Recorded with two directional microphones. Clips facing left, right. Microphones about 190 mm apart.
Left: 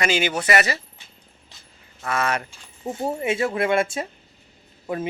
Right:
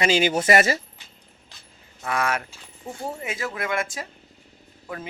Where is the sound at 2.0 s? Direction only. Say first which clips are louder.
Left 1 dB; 10° right (ahead or behind).